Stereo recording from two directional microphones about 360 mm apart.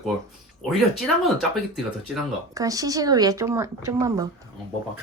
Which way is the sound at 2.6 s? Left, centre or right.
Centre.